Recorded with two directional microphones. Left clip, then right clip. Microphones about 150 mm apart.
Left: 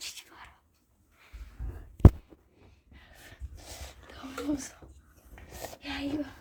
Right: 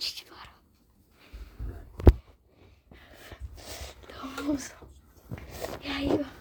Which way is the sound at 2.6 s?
65° right (ahead or behind).